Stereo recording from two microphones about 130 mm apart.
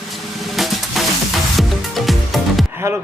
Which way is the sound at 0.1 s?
Centre (ahead or behind).